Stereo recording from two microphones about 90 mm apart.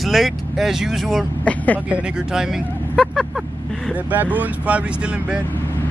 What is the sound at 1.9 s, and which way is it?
Speech, 10° right (ahead or behind).